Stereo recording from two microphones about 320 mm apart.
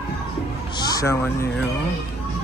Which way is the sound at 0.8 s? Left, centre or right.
Centre.